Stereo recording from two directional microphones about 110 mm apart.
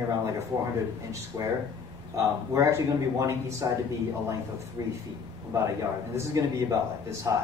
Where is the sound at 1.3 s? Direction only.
30° right (ahead or behind).